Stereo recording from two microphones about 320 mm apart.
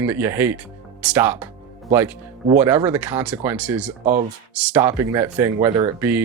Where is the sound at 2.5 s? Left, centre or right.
Centre.